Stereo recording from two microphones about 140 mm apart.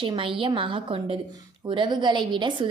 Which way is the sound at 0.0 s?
40° right (ahead or behind).